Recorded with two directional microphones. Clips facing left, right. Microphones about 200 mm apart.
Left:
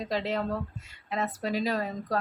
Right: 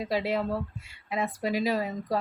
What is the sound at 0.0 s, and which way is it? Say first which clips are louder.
A woman's voice: right 2 dB; 10° right (ahead or behind).